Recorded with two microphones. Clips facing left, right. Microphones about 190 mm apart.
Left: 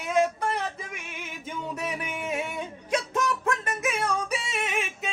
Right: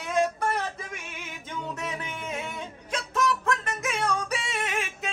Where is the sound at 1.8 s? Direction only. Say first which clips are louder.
Left 2 dB; 10° left (ahead or behind).